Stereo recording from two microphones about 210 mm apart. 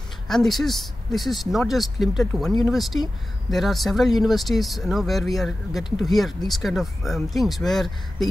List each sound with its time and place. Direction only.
0.3 s speech: centre (ahead or behind)
5.9 s speech: 20° left (ahead or behind)
6.1 s speech: centre (ahead or behind)